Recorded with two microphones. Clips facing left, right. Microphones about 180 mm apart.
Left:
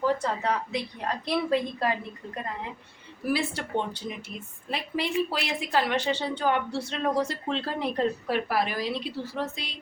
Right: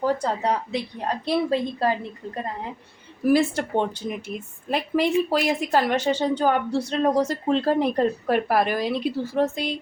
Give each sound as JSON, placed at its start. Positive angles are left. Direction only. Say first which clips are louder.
{"t": 0.0, "sound": "a woman's voice", "louder": "right 3 dB", "side_deg": -35}
{"t": 3.2, "sound": "speech", "louder": "right 9 dB", "side_deg": -50}